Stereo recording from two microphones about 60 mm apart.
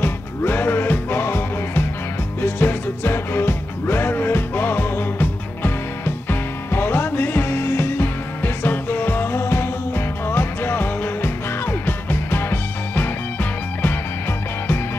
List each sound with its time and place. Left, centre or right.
0.0 s music: left